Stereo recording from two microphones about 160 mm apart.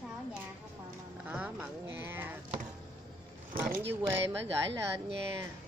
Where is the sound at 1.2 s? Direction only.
10° right (ahead or behind).